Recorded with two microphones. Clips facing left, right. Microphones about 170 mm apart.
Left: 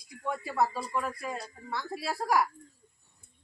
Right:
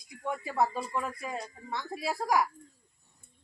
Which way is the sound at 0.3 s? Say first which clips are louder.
Even; 20° right (ahead or behind).